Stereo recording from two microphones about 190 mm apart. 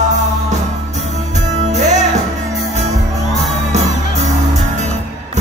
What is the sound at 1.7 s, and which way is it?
Music, 40° right (ahead or behind).